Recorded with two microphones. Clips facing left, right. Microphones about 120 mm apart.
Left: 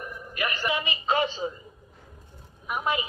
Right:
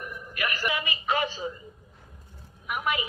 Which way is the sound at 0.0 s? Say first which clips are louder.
Left 1 dB; 25° left (ahead or behind).